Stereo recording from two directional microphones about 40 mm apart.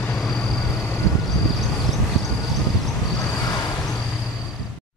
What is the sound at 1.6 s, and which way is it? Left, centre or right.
Vehicle, centre.